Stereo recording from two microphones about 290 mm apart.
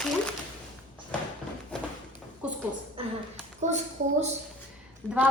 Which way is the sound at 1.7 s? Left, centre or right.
Centre.